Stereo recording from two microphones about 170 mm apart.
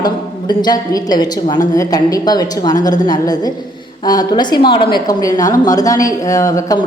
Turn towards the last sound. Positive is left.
turn(degrees=20)  # may be behind; listen again after turning